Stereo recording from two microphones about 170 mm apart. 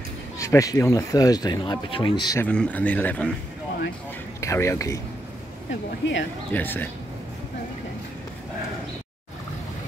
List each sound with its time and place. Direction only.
0.4 s speech: 20° left (ahead or behind)
2.4 s a man's voice: 10° left (ahead or behind)
4.4 s a man's voice: 15° left (ahead or behind)
6.0 s speech: 90° left
6.5 s a man's voice: 10° left (ahead or behind)